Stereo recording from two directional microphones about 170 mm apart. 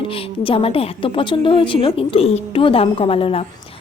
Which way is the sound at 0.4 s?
35° left (ahead or behind).